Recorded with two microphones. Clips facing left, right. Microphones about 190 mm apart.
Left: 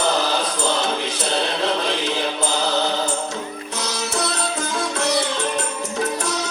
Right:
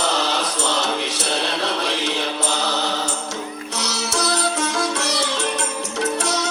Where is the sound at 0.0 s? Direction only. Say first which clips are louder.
Left 2 dB; 75° right (ahead or behind).